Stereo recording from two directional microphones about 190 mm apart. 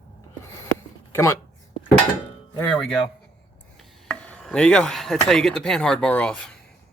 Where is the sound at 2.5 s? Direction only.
5° left (ahead or behind).